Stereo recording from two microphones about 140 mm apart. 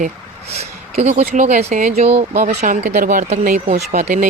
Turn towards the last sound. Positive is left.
turn(degrees=-60)  # may be behind; listen again after turning